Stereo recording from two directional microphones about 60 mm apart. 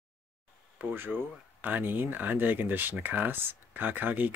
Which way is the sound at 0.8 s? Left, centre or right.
Right.